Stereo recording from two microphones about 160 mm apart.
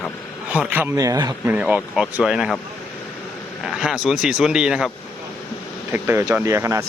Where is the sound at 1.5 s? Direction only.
10° right (ahead or behind).